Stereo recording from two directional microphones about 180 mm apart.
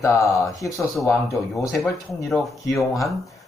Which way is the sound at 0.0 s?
15° left (ahead or behind).